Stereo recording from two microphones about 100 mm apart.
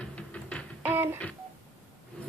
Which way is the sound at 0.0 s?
10° left (ahead or behind).